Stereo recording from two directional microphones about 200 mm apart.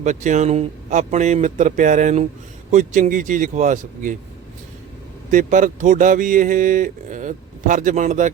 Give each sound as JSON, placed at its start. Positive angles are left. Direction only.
{"t": 0.0, "sound": "speech", "side_deg": -40}
{"t": 5.3, "sound": "speech", "side_deg": -40}